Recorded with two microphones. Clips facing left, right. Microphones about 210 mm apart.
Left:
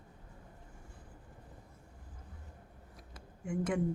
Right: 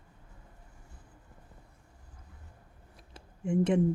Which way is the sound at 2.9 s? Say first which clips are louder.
Right 1 dB; 25° right (ahead or behind).